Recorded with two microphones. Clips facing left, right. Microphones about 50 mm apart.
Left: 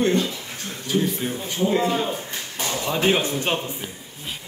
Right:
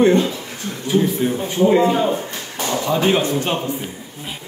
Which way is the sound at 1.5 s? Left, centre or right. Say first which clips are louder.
Right 6 dB; right.